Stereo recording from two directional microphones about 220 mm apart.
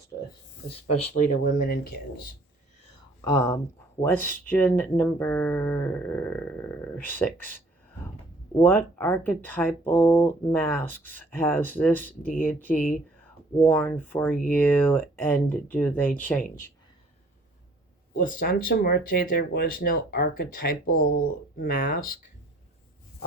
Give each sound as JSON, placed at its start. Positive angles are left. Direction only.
{"t": 0.7, "sound": "speech", "side_deg": 30}
{"t": 3.2, "sound": "speech", "side_deg": 15}
{"t": 8.5, "sound": "speech", "side_deg": 10}
{"t": 18.2, "sound": "speech", "side_deg": 40}